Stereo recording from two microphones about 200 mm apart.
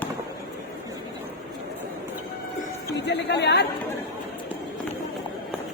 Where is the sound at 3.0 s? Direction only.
60° left (ahead or behind).